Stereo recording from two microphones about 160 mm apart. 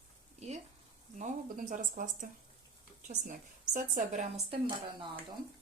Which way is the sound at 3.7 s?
55° right (ahead or behind).